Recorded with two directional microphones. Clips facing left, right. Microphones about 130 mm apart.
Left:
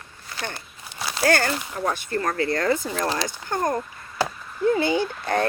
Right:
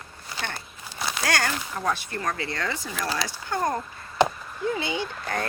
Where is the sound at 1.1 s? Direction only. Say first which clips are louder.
Left 6 dB; 30° left (ahead or behind).